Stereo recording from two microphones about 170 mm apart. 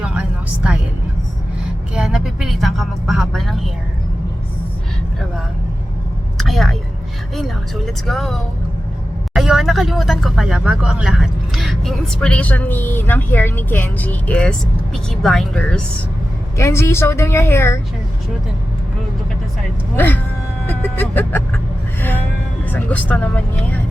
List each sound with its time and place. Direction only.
0.0 s music: 5° right (ahead or behind)
2.0 s speech: 5° right (ahead or behind)
6.3 s a sound: centre (ahead or behind)
8.0 s speech: centre (ahead or behind)
16.6 s a woman's voice: 15° left (ahead or behind)
20.0 s a woman's voice: 10° left (ahead or behind)
22.7 s a woman's voice: 10° left (ahead or behind)